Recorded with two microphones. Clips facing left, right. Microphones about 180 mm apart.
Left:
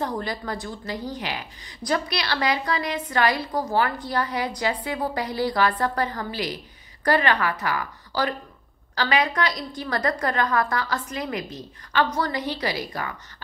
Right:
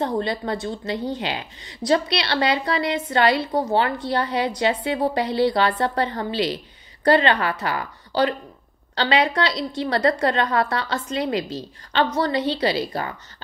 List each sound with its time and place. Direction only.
0.0 s a woman's voice: 25° right (ahead or behind)